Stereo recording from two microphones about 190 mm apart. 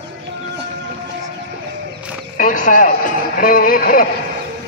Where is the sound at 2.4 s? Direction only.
45° left (ahead or behind).